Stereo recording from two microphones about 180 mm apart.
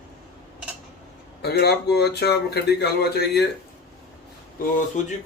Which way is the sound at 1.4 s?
65° left (ahead or behind).